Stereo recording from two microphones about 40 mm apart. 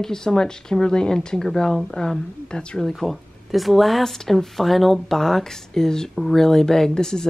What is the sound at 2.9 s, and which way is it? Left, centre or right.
Speech, centre.